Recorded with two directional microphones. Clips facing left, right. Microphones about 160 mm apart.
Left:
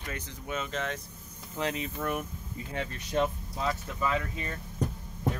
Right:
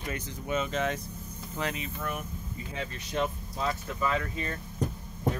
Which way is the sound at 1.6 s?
35° left (ahead or behind).